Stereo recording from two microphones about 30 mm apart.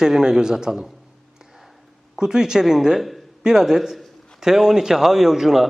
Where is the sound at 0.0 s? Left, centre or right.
Centre.